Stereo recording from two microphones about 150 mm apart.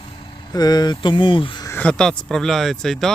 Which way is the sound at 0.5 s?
25° left (ahead or behind).